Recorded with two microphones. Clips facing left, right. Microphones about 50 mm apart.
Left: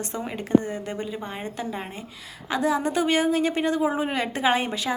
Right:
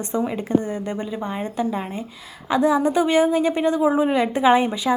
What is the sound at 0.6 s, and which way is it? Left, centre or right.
Speech, left.